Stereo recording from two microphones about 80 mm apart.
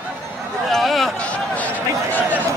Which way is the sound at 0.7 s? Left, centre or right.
Centre.